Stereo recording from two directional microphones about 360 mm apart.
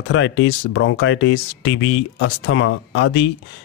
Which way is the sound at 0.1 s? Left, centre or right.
Left.